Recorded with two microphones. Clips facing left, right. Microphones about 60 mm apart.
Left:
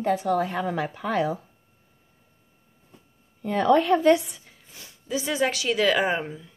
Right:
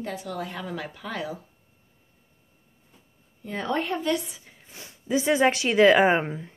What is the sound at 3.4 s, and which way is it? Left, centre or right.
Speech, left.